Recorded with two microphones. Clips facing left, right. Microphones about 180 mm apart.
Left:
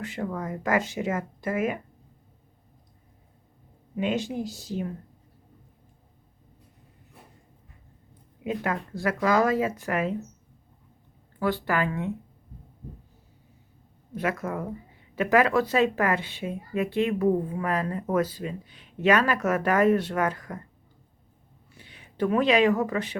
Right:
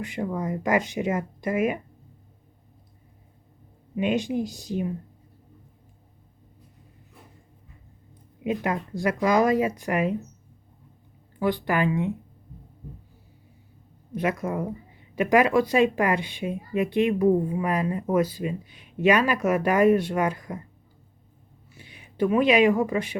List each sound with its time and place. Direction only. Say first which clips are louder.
0.0 s speech: right 3 dB; 15° right (ahead or behind)
3.9 s speech: right 3 dB; 15° right (ahead or behind)
8.4 s speech: right 2 dB; 20° right (ahead or behind)
11.3 s speech: right 2 dB; 15° right (ahead or behind)
14.1 s speech: right 2 dB; 20° right (ahead or behind)
21.8 s speech: right 3 dB; 15° right (ahead or behind)